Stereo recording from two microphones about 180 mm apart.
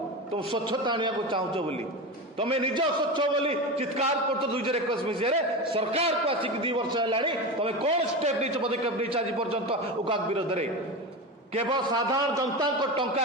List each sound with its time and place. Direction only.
0.3 s a man's voice: 25° right (ahead or behind)
11.5 s a man's voice: 20° right (ahead or behind)